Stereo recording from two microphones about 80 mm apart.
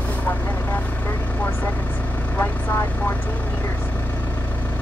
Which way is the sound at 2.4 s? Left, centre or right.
Left.